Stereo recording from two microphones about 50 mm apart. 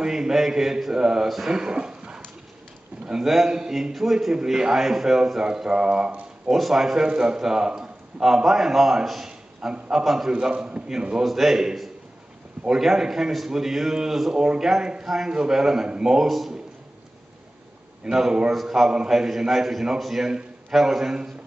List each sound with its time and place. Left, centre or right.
0.0 s a man's voice: centre
1.6 s a sound: centre
3.1 s a man's voice: centre; by 6.1 s right
6.5 s a man's voice: centre
11.2 s a man's voice: centre
18.0 s a man's voice: centre